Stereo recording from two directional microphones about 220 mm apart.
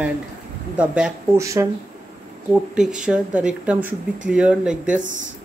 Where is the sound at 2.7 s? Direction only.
5° right (ahead or behind).